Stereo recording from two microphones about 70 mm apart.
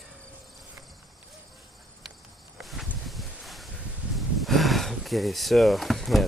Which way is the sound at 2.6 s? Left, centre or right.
Centre.